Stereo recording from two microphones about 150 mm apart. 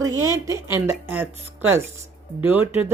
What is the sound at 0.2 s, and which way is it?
Speech, 20° right (ahead or behind).